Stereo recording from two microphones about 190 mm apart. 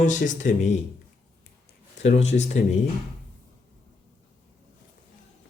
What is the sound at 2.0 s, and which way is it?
Speech, 40° left (ahead or behind).